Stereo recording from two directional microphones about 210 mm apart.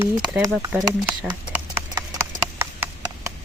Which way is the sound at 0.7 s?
5° right (ahead or behind).